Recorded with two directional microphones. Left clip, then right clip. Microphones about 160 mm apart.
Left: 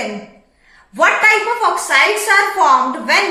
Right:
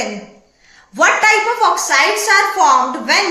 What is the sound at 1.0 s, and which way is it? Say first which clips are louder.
A woman's voice: even; 25° right (ahead or behind).